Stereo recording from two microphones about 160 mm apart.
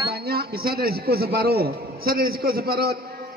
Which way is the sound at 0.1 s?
75° right (ahead or behind).